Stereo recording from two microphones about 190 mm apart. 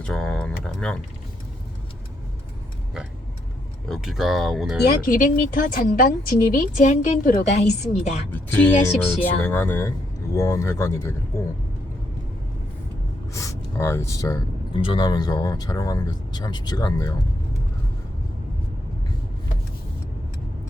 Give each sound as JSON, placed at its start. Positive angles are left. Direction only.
{"t": 0.0, "sound": "tick", "side_deg": 5}
{"t": 3.8, "sound": "speech", "side_deg": 0}
{"t": 5.0, "sound": "a woman's voice", "side_deg": 45}
{"t": 8.3, "sound": "speech", "side_deg": 10}
{"t": 13.3, "sound": "speech", "side_deg": 15}